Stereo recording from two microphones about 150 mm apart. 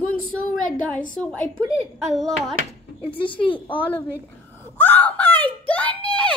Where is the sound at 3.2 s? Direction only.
35° left (ahead or behind).